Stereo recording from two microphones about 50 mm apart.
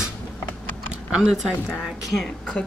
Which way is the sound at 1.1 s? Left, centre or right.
Centre.